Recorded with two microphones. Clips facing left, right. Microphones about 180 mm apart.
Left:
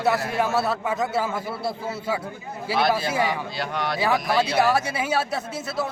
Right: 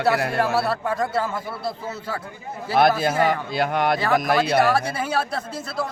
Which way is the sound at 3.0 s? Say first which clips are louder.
Right 4 dB; 50° right (ahead or behind).